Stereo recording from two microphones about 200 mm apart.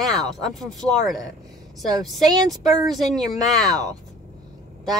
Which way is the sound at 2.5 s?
Centre (ahead or behind).